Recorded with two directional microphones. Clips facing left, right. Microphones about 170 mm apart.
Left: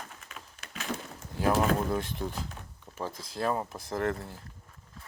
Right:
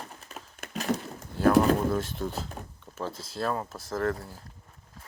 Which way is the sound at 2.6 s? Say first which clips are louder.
Right 6 dB; 40° right (ahead or behind).